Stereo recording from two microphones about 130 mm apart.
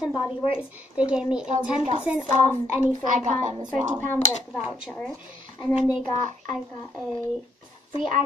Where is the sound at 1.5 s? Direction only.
60° right (ahead or behind).